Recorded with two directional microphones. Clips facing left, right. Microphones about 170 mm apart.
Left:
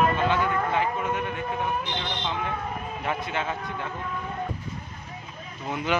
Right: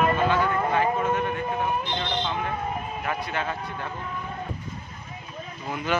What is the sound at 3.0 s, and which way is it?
Speech, 20° left (ahead or behind).